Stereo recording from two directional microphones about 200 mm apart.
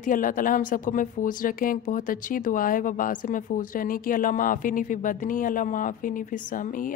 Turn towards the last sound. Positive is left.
turn(degrees=40)  # may be behind; listen again after turning